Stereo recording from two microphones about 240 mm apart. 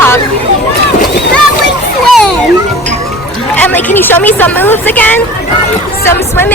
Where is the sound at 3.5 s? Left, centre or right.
Centre.